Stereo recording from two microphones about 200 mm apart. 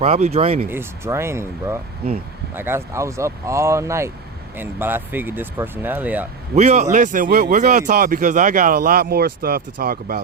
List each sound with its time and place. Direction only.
0.0 s speech: 30° right (ahead or behind)
0.7 s speech: 10° right (ahead or behind)
6.6 s speech: 35° right (ahead or behind)